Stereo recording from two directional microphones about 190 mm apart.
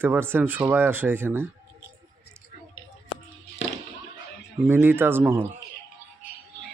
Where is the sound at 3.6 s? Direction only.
80° left.